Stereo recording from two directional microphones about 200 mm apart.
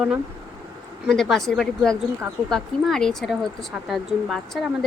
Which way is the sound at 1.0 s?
Centre (ahead or behind).